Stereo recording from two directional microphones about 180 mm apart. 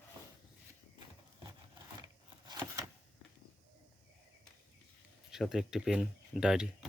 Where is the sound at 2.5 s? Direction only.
15° right (ahead or behind).